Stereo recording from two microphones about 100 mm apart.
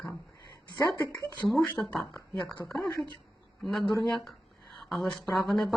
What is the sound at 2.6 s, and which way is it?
Speech, 30° left (ahead or behind).